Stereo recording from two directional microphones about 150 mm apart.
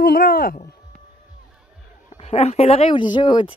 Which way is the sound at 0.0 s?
75° left (ahead or behind).